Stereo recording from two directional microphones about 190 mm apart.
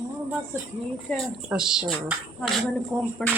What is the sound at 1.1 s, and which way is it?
Speech, 10° left (ahead or behind).